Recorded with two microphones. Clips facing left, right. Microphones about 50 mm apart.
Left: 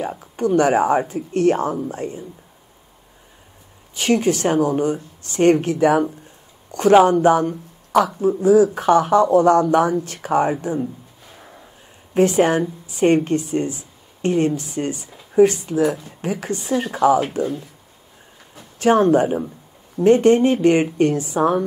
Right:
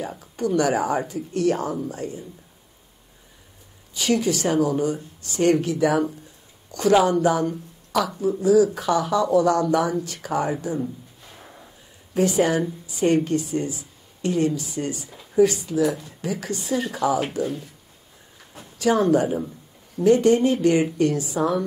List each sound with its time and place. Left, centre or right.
0.0 s speech: left
3.9 s speech: left
11.3 s a sound: centre
12.1 s a woman's voice: left
18.8 s speech: left